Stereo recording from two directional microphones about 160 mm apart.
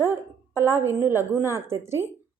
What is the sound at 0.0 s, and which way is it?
A woman's voice, 15° right (ahead or behind).